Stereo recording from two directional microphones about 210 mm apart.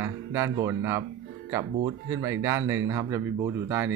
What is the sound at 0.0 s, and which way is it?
Speech, 10° right (ahead or behind).